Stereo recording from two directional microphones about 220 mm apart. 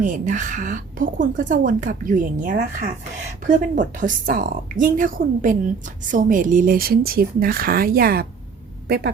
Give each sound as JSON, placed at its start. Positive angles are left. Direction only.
{"t": 0.0, "sound": "a woman's voice", "side_deg": -35}